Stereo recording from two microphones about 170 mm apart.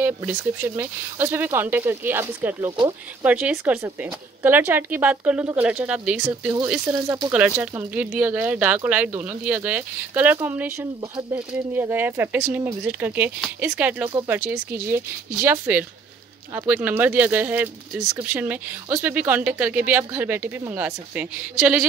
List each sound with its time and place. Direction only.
0.0 s speech: 10° right (ahead or behind)
6.7 s speech: 20° right (ahead or behind)
7.3 s speech: 5° right (ahead or behind)